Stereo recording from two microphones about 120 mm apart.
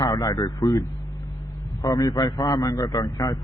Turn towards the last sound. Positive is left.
turn(degrees=30)  # may be behind; listen again after turning